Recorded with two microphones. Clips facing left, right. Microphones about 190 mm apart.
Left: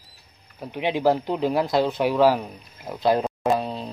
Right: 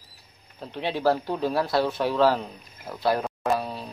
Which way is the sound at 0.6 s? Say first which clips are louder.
Left 3 dB; 15° left (ahead or behind).